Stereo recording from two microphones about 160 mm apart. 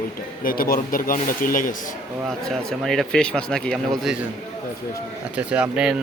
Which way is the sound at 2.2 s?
Centre (ahead or behind).